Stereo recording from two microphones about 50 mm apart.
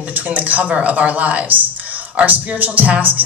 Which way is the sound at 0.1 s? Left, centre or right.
Right.